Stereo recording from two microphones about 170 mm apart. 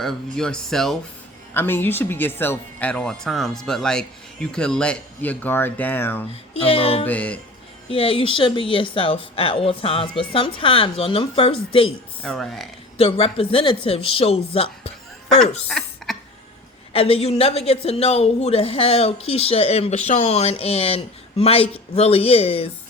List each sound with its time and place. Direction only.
0.0 s speech: centre (ahead or behind)
1.5 s speech: 10° left (ahead or behind)
6.5 s a woman's voice: 35° left (ahead or behind)
7.0 s speech: 10° left (ahead or behind)
7.9 s a woman's voice: 30° left (ahead or behind)
12.2 s speech: 5° left (ahead or behind)
13.0 s a woman's voice: 35° left (ahead or behind)
15.4 s a sound: 5° left (ahead or behind)
16.9 s a woman's voice: 35° left (ahead or behind)